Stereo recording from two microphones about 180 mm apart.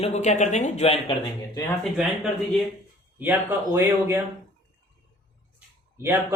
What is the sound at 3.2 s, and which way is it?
Speech, 10° right (ahead or behind).